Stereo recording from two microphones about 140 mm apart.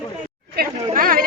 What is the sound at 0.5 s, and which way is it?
Speech, 90° right.